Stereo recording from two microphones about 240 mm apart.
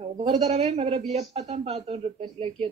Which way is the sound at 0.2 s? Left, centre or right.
Right.